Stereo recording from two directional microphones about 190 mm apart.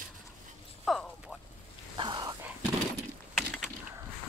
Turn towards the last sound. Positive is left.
turn(degrees=0)  # may be behind; listen again after turning